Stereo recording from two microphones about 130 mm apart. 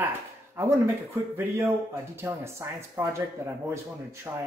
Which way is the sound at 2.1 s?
20° right (ahead or behind).